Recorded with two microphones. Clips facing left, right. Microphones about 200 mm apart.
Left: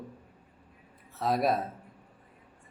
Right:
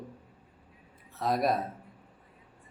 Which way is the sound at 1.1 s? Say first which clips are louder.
Left 1 dB; centre (ahead or behind).